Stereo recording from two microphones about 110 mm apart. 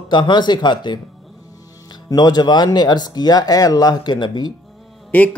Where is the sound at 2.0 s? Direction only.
40° left (ahead or behind).